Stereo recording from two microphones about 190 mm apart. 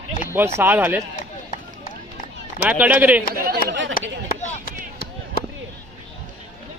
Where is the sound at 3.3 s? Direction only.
50° right (ahead or behind).